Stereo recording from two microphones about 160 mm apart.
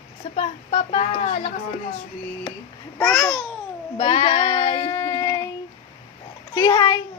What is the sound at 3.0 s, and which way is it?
Speech, 15° left (ahead or behind).